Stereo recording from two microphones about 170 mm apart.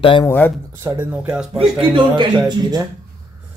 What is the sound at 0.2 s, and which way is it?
Speech, 10° left (ahead or behind).